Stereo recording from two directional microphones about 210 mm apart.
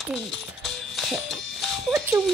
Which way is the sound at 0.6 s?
Centre (ahead or behind).